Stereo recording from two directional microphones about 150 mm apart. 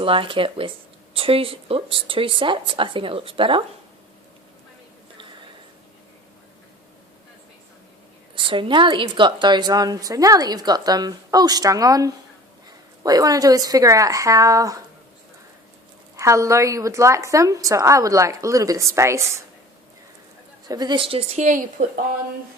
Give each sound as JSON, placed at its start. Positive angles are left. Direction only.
{"t": 0.0, "sound": "speech", "side_deg": -35}
{"t": 8.4, "sound": "a woman's voice", "side_deg": -35}
{"t": 16.1, "sound": "a woman's voice", "side_deg": -20}
{"t": 20.7, "sound": "speech", "side_deg": -25}
{"t": 21.3, "sound": "a woman's voice", "side_deg": -60}